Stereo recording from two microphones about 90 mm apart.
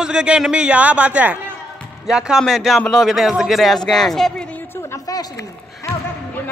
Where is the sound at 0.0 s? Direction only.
10° right (ahead or behind); by 4.5 s 5° left (ahead or behind).